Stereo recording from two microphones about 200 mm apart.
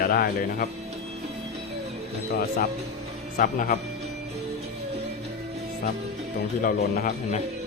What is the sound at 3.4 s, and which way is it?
Speech, 40° left (ahead or behind).